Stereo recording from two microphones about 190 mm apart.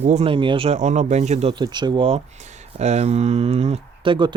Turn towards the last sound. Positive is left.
turn(degrees=-25)  # may be behind; listen again after turning